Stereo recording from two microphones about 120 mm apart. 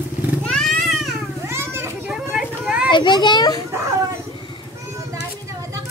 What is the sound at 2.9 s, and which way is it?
Speech, 40° left (ahead or behind).